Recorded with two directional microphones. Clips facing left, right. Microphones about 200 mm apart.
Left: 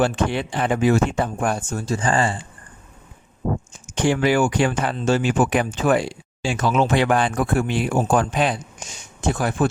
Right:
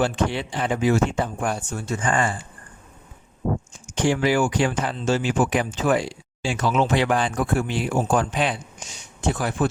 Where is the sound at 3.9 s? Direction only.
60° left (ahead or behind).